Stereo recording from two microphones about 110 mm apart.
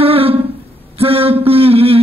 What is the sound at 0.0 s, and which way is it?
Humming, 60° right (ahead or behind).